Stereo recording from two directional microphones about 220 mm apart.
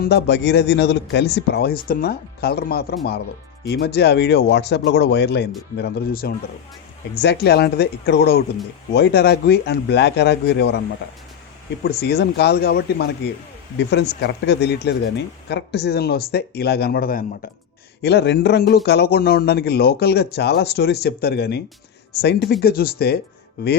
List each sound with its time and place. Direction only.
0.0 s speech: 45° left (ahead or behind)
11.8 s speech: 45° left (ahead or behind)